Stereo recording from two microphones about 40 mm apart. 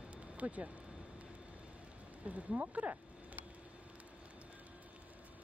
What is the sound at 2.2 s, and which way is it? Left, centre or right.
Speech, right.